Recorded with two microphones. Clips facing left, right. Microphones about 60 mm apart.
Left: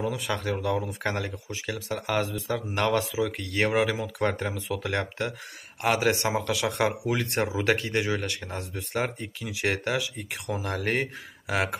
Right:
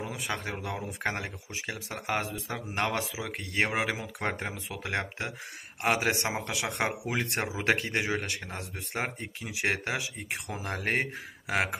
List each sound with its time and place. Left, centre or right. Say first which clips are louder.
0.1 s speech: left 5 dB; right